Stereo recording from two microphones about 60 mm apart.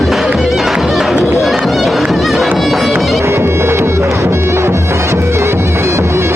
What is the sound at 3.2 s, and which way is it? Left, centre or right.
Music, right.